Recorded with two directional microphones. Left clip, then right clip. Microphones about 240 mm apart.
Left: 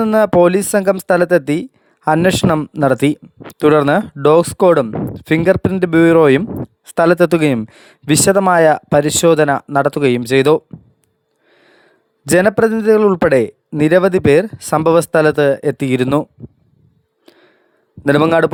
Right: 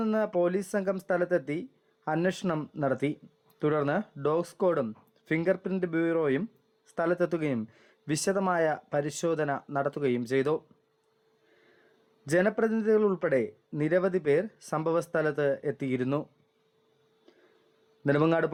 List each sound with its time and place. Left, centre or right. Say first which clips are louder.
0.0 s speech: left 17 dB; left
12.2 s speech: left 14 dB; left
17.3 s a sound: left 15 dB; left
18.0 s speech: left 14 dB; left